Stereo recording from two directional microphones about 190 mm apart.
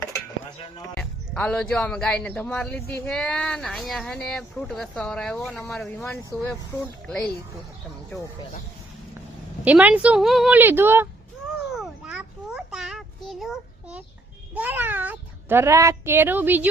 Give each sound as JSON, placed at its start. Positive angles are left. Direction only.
{"t": 0.9, "sound": "speech", "side_deg": 5}
{"t": 9.6, "sound": "speech", "side_deg": -5}
{"t": 11.7, "sound": "a sound", "side_deg": -5}
{"t": 14.5, "sound": "speech", "side_deg": -10}